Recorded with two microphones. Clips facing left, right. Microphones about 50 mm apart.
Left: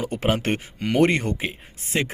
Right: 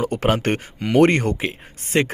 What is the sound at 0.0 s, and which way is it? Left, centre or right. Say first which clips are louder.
Speech: right 4 dB; right.